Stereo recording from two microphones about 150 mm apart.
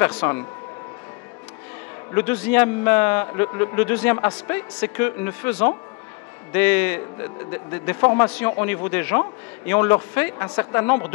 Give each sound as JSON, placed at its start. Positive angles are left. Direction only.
{"t": 0.0, "sound": "a man's voice", "side_deg": 15}
{"t": 2.1, "sound": "a man's voice", "side_deg": 10}